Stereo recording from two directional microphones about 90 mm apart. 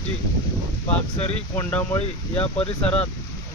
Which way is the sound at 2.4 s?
90° left.